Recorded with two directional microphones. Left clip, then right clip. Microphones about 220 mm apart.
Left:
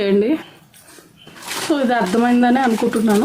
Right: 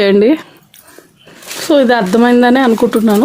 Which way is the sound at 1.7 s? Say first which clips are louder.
Right 8 dB; 45° right (ahead or behind).